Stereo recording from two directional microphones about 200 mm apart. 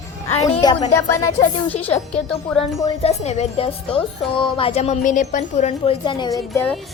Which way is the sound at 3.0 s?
35° left (ahead or behind).